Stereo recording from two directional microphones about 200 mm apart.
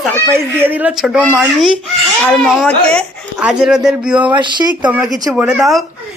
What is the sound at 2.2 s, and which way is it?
A child's voice, centre (ahead or behind).